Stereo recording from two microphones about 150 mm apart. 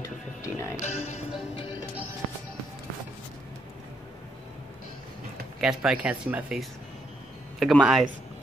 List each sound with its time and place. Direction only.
0.0 s music: 20° left (ahead or behind)
0.8 s music: 45° left (ahead or behind)
5.6 s speech: 5° right (ahead or behind)